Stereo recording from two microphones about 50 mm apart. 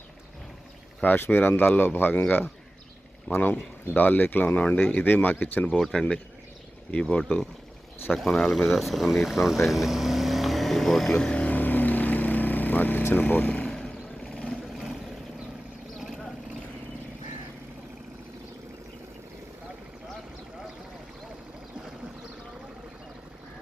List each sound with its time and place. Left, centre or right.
1.0 s speech: left
3.5 s speech: left
5.6 s speech: centre
8.1 s speech: centre
8.4 s speech: centre
11.1 s vehicle: centre
11.5 s vehicle: left
13.7 s vehicle: centre
14.5 s vehicle: centre
16.0 s vehicle: centre